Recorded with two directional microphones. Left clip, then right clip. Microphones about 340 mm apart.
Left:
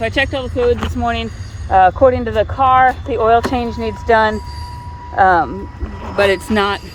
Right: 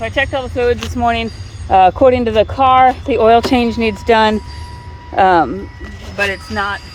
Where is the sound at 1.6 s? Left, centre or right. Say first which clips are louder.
Right 1 dB; right.